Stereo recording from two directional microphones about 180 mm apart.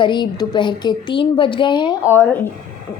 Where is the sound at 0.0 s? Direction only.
25° left (ahead or behind).